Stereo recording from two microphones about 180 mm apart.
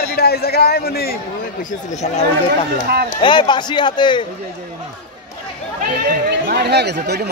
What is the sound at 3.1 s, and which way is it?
A man's voice, 25° left (ahead or behind).